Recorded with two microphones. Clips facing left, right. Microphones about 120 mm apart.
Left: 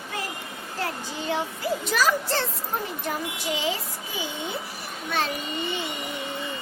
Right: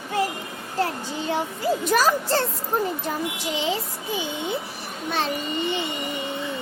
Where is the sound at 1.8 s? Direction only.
45° right (ahead or behind).